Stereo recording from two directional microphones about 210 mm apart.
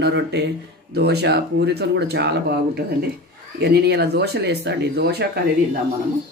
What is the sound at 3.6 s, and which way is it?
Speech, 50° right (ahead or behind).